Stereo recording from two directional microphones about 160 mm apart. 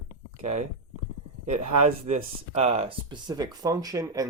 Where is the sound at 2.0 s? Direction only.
45° right (ahead or behind); by 4.2 s 25° right (ahead or behind).